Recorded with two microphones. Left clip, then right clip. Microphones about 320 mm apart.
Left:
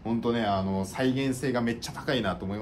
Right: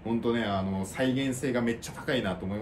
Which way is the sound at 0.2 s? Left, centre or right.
Centre.